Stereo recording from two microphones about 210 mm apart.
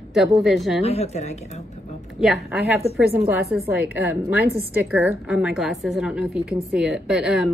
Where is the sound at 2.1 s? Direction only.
Centre (ahead or behind).